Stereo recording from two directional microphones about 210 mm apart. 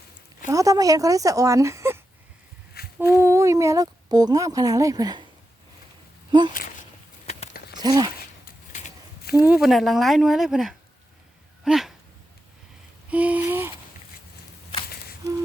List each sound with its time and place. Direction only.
0.4 s a woman's voice: 15° right (ahead or behind)
2.7 s humming: 50° left (ahead or behind)
3.2 s speech: 15° right (ahead or behind)
6.5 s a sound: 40° left (ahead or behind)
7.3 s a sound: 30° left (ahead or behind)
7.8 s speech: 20° right (ahead or behind)
9.5 s speech: centre (ahead or behind)
11.6 s dog: centre (ahead or behind)
13.1 s a sound: 5° right (ahead or behind)